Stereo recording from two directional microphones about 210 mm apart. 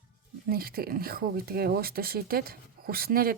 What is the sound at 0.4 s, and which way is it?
Speech, 45° right (ahead or behind).